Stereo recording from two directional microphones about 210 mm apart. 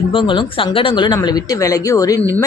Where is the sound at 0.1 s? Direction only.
25° left (ahead or behind).